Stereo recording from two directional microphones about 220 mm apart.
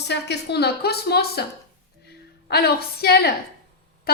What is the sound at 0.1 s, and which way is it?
A woman's voice, 50° left (ahead or behind).